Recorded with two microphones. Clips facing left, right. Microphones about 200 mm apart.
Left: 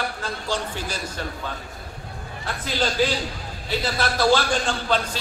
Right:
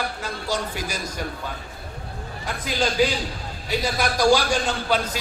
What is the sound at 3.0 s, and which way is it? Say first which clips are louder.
A man's voice: right 1 dB; 10° right (ahead or behind).